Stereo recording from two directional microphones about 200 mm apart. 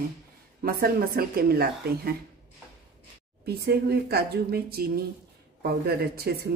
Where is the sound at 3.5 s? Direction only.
55° right (ahead or behind).